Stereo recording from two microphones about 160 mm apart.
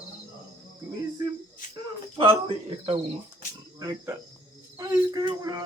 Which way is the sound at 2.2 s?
35° right (ahead or behind).